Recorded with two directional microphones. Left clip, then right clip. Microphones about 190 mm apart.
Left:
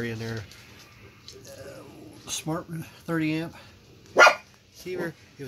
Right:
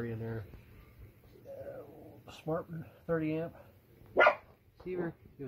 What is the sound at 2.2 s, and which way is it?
Speech, 5° left (ahead or behind).